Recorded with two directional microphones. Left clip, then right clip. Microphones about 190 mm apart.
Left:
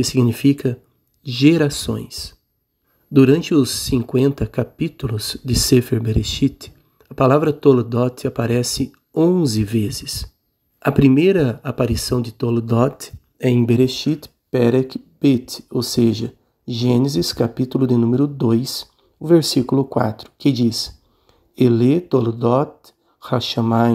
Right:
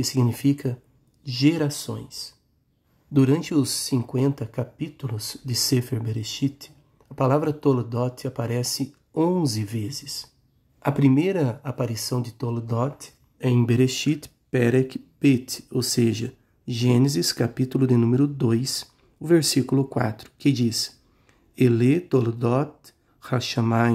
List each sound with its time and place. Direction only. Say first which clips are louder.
0.0 s speech: left 7 dB; 15° left (ahead or behind)
9.1 s speech: left 6 dB; centre (ahead or behind)
9.4 s speech: left 8 dB; 15° left (ahead or behind)
13.6 s speech: left 4 dB; 5° right (ahead or behind)